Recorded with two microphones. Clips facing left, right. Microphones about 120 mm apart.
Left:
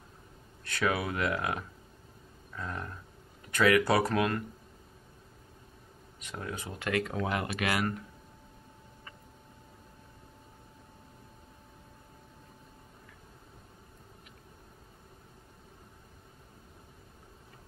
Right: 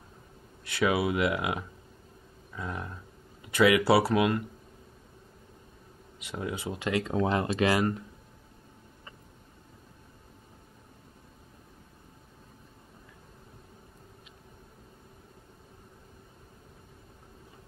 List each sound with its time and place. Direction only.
0.7 s speech: 15° right (ahead or behind)
6.2 s speech: 15° right (ahead or behind)